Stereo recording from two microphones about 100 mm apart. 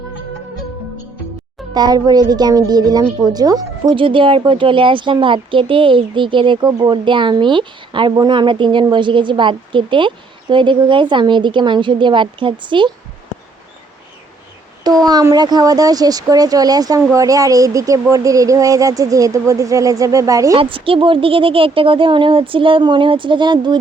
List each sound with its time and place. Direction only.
1.7 s speech: 45° right (ahead or behind)
3.9 s a woman's voice: 60° right (ahead or behind)
14.8 s speech: 40° right (ahead or behind)
20.6 s speech: 65° right (ahead or behind)